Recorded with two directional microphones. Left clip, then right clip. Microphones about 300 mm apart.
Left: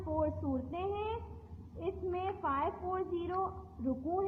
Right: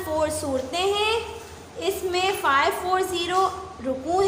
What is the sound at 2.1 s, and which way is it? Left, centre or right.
A woman's voice, left.